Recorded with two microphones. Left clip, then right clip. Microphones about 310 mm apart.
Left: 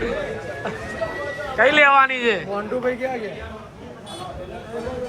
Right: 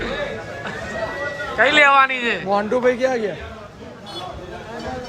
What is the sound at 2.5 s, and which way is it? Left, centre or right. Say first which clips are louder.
Speech: right 6 dB; right.